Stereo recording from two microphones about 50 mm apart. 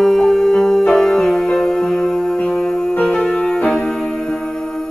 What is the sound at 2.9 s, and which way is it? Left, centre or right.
Music, left.